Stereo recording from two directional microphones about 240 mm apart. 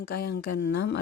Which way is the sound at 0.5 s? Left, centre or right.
Left.